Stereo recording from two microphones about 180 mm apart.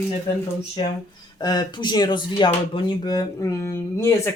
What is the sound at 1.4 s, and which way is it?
Speech, 25° left (ahead or behind).